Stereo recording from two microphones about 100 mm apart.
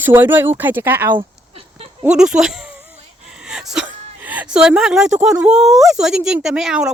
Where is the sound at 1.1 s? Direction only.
70° right (ahead or behind).